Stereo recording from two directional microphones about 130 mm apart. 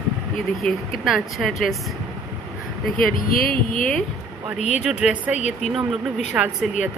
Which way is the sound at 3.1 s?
90° left.